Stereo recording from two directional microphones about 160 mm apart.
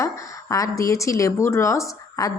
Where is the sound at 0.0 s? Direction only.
20° left (ahead or behind).